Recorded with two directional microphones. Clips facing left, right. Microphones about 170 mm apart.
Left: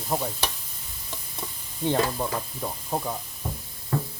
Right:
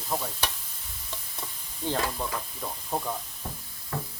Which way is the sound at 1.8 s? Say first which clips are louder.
Left 5 dB; 20° left (ahead or behind).